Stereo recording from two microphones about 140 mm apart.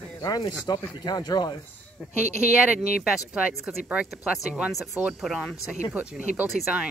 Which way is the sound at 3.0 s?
5° right (ahead or behind).